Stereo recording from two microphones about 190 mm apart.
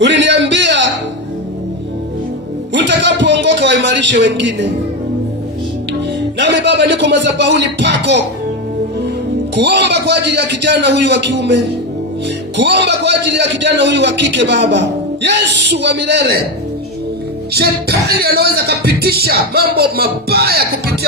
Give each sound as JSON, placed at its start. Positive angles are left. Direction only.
{"t": 0.0, "sound": "a sound", "side_deg": -70}
{"t": 2.7, "sound": "a man's voice", "side_deg": -70}
{"t": 6.4, "sound": "a man's voice", "side_deg": -65}
{"t": 9.6, "sound": "a man's voice", "side_deg": -65}
{"t": 17.5, "sound": "a man's voice", "side_deg": -55}